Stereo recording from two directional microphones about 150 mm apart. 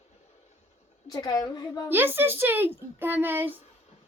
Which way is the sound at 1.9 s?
15° right (ahead or behind).